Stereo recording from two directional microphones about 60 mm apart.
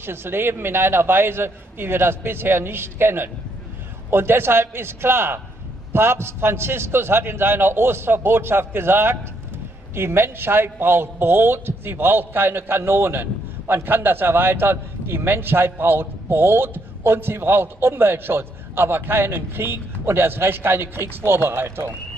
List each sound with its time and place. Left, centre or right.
0.0 s a man's voice: right